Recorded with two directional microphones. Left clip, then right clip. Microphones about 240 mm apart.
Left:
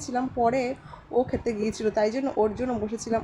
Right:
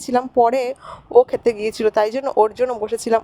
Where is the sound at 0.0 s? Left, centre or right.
Right.